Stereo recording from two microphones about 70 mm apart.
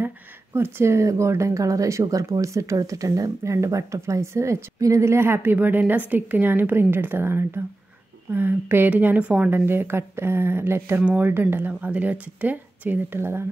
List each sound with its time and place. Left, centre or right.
0.6 s speech: right
9.5 s speech: right
13.2 s speech: right